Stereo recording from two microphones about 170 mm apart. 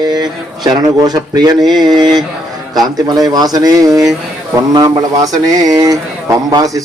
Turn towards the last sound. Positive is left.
turn(degrees=-20)  # may be behind; listen again after turning